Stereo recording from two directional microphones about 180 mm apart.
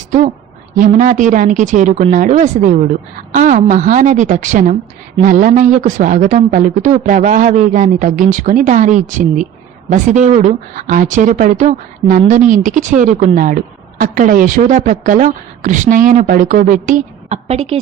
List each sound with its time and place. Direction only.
0.8 s speech: 45° right (ahead or behind)